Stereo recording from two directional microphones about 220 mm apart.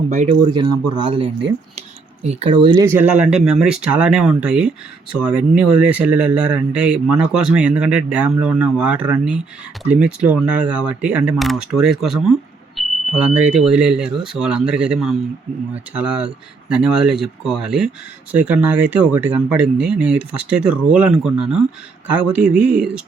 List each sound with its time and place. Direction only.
0.1 s speech: 35° right (ahead or behind)
0.5 s a man's voice: 20° right (ahead or behind)